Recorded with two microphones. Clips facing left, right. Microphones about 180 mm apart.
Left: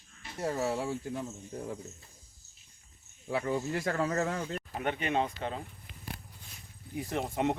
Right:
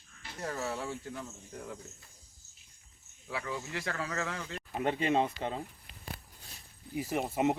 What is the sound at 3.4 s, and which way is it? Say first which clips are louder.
Speech: left 6 dB; 40° left (ahead or behind).